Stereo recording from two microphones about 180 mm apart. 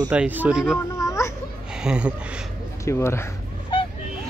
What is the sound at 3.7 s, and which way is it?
Vehicle, 30° left (ahead or behind).